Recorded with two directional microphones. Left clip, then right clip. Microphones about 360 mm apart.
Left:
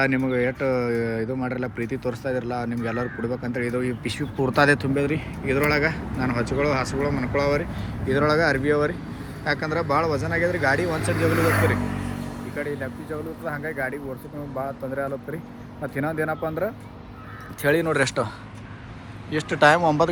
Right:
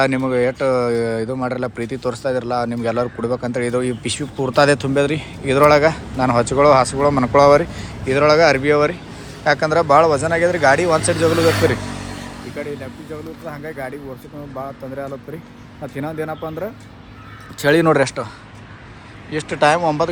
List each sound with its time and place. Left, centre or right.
0.0 s speech: centre
13.4 s speech: centre
17.6 s speech: right
17.9 s speech: centre
19.3 s speech: centre